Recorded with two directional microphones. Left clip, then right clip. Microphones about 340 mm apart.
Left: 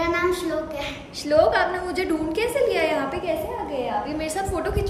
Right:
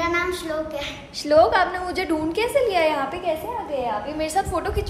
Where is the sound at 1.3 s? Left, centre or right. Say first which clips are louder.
Right 2 dB; centre.